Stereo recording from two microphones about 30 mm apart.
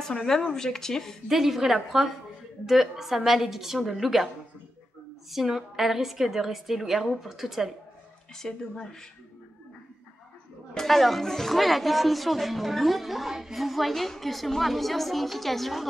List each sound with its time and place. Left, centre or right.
0.0 s a woman's voice: centre
1.3 s a woman's voice: centre
5.3 s a woman's voice: centre
8.4 s speech: centre
10.9 s a woman's voice: centre